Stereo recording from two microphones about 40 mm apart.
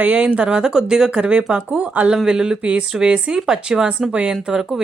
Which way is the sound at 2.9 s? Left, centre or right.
Centre.